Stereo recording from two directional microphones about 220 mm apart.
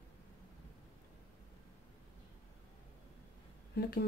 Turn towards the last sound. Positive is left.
turn(degrees=45)  # may be behind; listen again after turning